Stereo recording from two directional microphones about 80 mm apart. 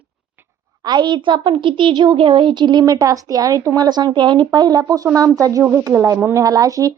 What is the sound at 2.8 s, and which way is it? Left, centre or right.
Speech, right.